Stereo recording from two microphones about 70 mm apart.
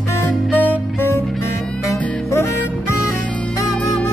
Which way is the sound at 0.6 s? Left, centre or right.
Left.